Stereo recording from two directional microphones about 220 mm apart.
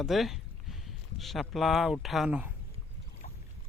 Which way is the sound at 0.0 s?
Centre (ahead or behind).